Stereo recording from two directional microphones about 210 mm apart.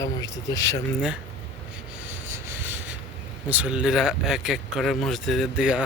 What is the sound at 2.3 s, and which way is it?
Rub, 10° right (ahead or behind).